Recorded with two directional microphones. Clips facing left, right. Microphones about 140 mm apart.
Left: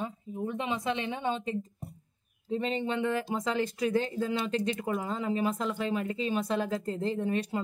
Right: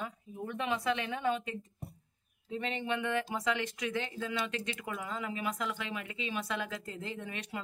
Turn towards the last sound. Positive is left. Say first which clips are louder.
# left 10 dB
turn(degrees=35)  # may be behind; listen again after turning